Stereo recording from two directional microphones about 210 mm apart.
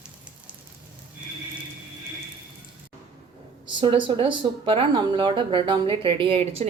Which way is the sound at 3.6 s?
25° right (ahead or behind).